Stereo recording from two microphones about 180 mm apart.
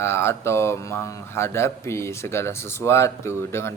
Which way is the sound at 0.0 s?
15° left (ahead or behind).